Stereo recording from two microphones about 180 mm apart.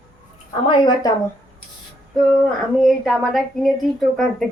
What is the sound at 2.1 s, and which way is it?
Speech, centre (ahead or behind).